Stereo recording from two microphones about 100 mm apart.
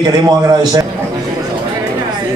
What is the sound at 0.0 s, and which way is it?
Speech, 40° right (ahead or behind).